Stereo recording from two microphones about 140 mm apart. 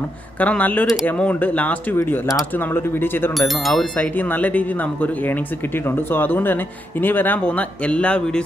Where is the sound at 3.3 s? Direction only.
Centre (ahead or behind).